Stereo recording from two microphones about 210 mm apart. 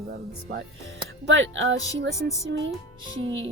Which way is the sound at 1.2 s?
60° right (ahead or behind).